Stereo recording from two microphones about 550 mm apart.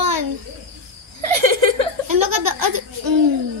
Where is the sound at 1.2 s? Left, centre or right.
Right.